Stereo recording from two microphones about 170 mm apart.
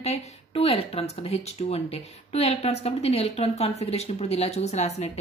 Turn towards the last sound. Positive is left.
turn(degrees=40)  # may be behind; listen again after turning